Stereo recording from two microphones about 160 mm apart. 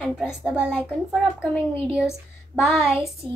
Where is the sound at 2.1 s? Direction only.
15° left (ahead or behind).